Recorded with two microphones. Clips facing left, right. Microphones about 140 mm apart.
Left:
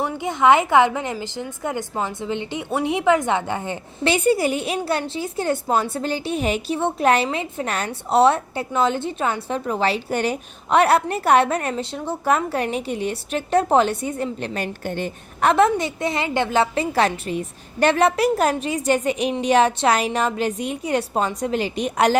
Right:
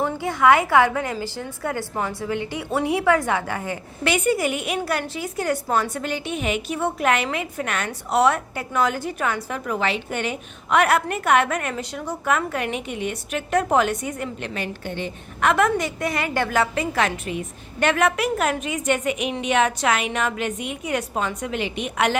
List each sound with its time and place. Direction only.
0.0 s a woman's voice: 20° left (ahead or behind); by 15.4 s 45° left (ahead or behind)
15.4 s a woman's voice: 30° left (ahead or behind)